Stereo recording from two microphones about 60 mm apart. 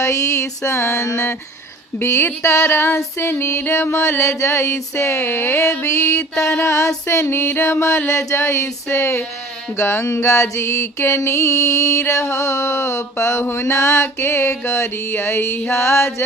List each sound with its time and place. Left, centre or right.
0.0 s mantra: left
2.0 s mantra: left
5.2 s mantra: left